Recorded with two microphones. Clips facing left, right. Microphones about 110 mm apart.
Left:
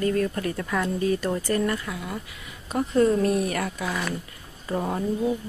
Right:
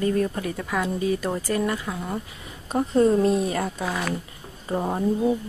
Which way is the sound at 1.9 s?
35° right (ahead or behind).